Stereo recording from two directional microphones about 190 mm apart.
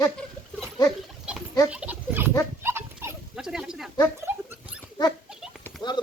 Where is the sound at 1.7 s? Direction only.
5° right (ahead or behind).